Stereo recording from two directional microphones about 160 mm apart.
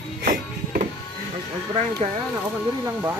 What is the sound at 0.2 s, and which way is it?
Music, 60° right (ahead or behind).